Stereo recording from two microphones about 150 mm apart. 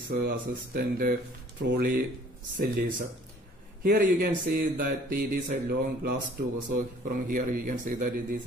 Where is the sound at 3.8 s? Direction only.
75° right (ahead or behind).